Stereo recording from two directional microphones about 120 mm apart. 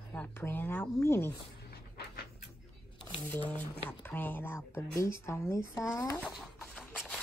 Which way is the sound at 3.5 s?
15° left (ahead or behind).